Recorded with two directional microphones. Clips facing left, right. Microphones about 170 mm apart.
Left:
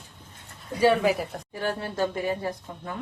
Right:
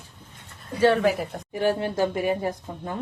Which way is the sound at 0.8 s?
5° left (ahead or behind).